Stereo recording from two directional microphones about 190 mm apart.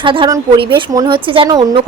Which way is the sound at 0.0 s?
25° right (ahead or behind).